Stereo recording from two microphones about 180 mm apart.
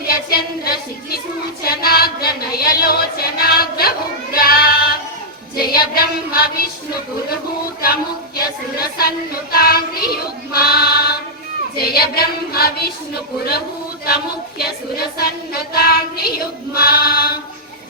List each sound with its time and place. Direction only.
0.1 s a sound: 55° left (ahead or behind)
1.6 s female singing: 55° left (ahead or behind)
4.4 s choir: 55° left (ahead or behind)
5.5 s music: 55° left (ahead or behind)
8.4 s child singing: 55° left (ahead or behind)
11.8 s music: 60° left (ahead or behind)
14.6 s child singing: 60° left (ahead or behind)
16.7 s choir: 55° left (ahead or behind)